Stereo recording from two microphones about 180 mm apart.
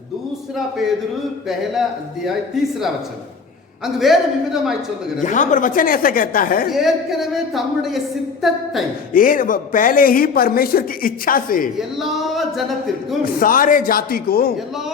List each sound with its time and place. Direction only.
3.8 s speech: centre (ahead or behind)
5.2 s speech: 45° left (ahead or behind)
6.7 s speech: centre (ahead or behind)
9.1 s speech: 50° left (ahead or behind)
11.8 s speech: centre (ahead or behind)
13.2 s speech: 50° left (ahead or behind)